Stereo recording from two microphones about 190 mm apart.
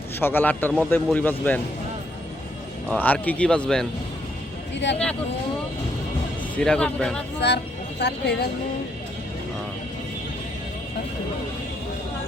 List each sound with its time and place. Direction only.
0.2 s a man's voice: 10° left (ahead or behind)
2.9 s a man's voice: 10° left (ahead or behind)
4.7 s speech: 70° left (ahead or behind)
6.6 s a man's voice: 5° left (ahead or behind)
7.3 s speech: 60° left (ahead or behind)